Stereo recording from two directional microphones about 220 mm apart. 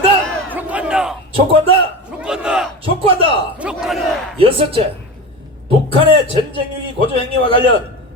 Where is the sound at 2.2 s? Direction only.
5° right (ahead or behind).